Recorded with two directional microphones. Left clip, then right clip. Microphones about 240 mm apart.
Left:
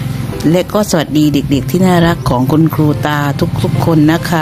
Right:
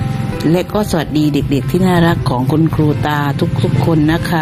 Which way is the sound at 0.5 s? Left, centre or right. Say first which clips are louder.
Left 4 dB; left.